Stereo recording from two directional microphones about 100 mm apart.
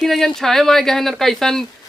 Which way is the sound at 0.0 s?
5° left (ahead or behind).